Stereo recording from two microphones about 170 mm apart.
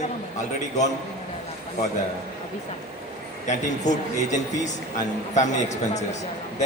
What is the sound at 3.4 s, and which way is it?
A man's voice, 45° left (ahead or behind).